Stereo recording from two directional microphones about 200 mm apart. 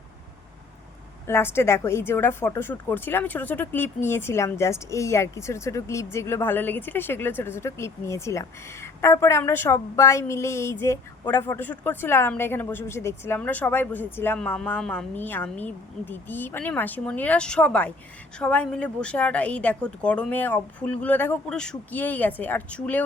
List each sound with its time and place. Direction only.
1.3 s a woman's voice: 10° left (ahead or behind)